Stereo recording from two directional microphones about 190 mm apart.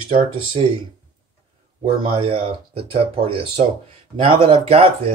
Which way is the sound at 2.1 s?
30° right (ahead or behind).